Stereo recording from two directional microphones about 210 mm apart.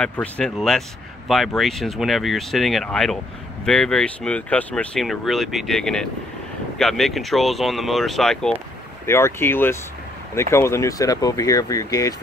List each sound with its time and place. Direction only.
0.0 s speech: 5° left (ahead or behind)